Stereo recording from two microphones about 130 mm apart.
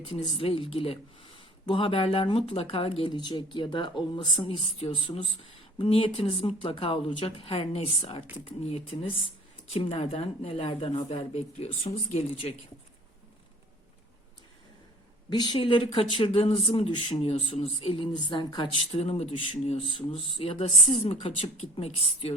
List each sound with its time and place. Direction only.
0.3 s speech: 40° left (ahead or behind)
3.1 s speech: 35° left (ahead or behind); by 12.5 s 55° left (ahead or behind)
15.3 s speech: 35° left (ahead or behind)
18.9 s speech: 50° left (ahead or behind)